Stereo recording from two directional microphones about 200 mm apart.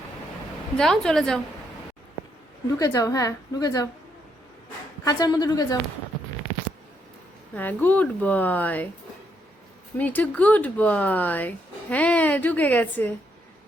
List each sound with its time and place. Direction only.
0.8 s a woman's voice: centre (ahead or behind)
2.7 s speech: 20° left (ahead or behind)
5.0 s a woman's voice: 20° left (ahead or behind)
7.5 s speech: 10° left (ahead or behind)
10.0 s speech: 10° left (ahead or behind)